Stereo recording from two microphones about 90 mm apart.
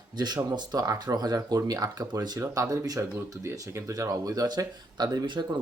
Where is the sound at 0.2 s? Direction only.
50° right (ahead or behind).